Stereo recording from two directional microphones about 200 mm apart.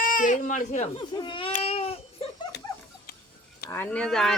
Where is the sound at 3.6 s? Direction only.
10° left (ahead or behind).